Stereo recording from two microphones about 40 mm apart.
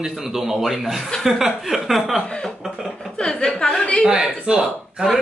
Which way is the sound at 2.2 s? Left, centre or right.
Left.